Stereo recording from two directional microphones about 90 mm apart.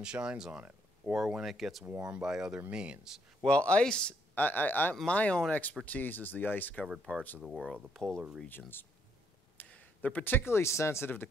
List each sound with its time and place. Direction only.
0.0 s speech: 10° right (ahead or behind)
3.4 s speech: 10° left (ahead or behind)
7.4 s speech: centre (ahead or behind)
8.5 s speech: 25° left (ahead or behind)